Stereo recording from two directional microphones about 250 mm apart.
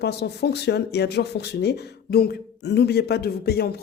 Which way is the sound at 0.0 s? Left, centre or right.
Left.